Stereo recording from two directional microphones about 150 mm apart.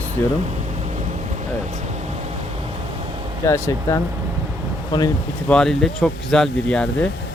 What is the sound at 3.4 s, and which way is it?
Speech, 20° left (ahead or behind).